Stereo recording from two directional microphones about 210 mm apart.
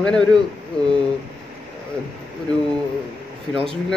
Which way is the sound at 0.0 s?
5° left (ahead or behind).